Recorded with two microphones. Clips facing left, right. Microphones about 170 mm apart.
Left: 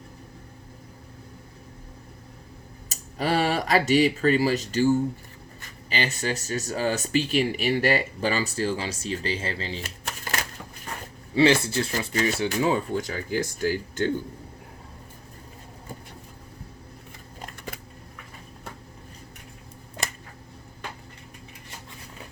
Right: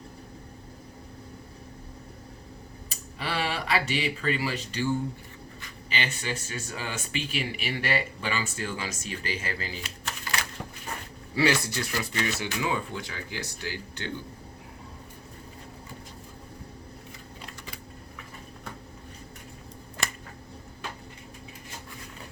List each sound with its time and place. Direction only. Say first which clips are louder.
2.9 s speech: left 8 dB; 45° left (ahead or behind)
10.3 s a sound: left 2 dB; 45° left (ahead or behind)
11.3 s speech: left 6 dB; 25° left (ahead or behind); by 14.1 s 45° left (ahead or behind)